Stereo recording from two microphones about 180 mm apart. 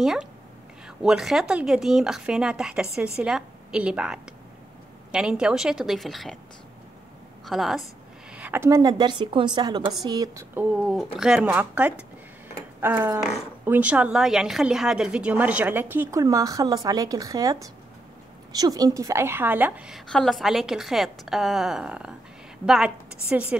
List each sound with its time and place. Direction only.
0.0 s a woman's voice: 5° right (ahead or behind)
7.4 s a woman's voice: centre (ahead or behind)